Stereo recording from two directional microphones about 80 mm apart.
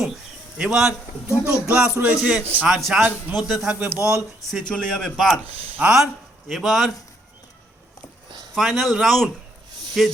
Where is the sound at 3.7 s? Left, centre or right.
Right.